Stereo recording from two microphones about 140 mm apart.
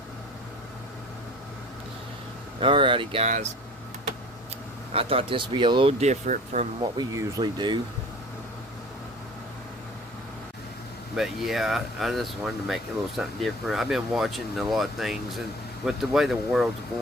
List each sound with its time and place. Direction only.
2.6 s speech: 35° right (ahead or behind)
3.2 s speech: 60° right (ahead or behind)
4.9 s speech: 40° right (ahead or behind)
6.0 s speech: 60° right (ahead or behind)
6.9 s speech: 25° right (ahead or behind)
11.2 s speech: centre (ahead or behind)